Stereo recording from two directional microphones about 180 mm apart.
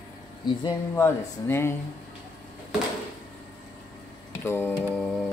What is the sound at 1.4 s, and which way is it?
Speech, 15° left (ahead or behind).